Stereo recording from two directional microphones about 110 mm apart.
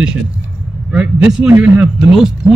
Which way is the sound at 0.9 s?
10° right (ahead or behind).